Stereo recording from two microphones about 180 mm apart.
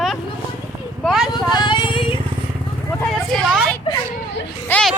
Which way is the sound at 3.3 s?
Centre (ahead or behind).